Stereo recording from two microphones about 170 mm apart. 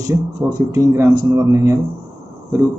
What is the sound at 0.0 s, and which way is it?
A man's voice, 20° right (ahead or behind).